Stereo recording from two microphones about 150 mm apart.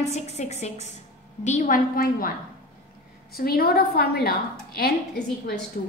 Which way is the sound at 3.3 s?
85° left.